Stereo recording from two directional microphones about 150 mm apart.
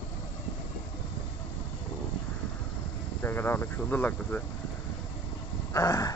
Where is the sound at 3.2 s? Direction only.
15° left (ahead or behind).